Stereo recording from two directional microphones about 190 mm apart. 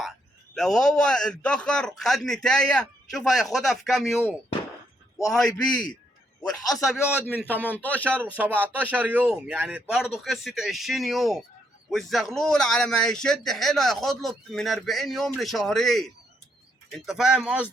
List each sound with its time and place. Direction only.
0.5 s speech: centre (ahead or behind)
6.4 s a man's voice: 20° left (ahead or behind)
8.5 s speech: 10° right (ahead or behind)